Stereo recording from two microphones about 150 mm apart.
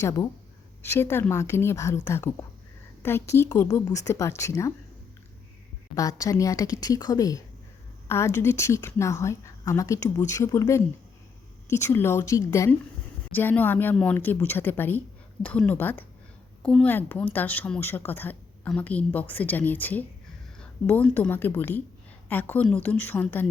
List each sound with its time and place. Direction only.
0.0 s a woman's voice: 25° left (ahead or behind)
5.9 s a woman's voice: 25° left (ahead or behind)